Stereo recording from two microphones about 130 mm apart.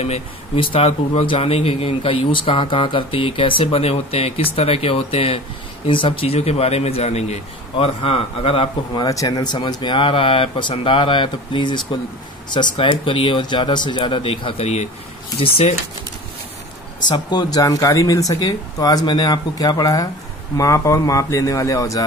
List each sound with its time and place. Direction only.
0.0 s speech: 50° left (ahead or behind)
9.0 s speech: 25° left (ahead or behind); by 15.7 s 50° left (ahead or behind)
17.0 s speech: 35° left (ahead or behind)